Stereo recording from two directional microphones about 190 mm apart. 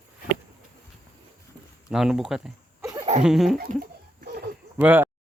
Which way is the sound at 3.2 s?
Centre (ahead or behind).